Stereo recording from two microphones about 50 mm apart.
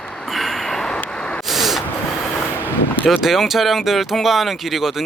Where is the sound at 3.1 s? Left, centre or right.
Centre.